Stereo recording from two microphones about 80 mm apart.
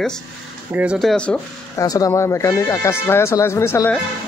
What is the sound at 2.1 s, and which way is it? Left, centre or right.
Speech, left.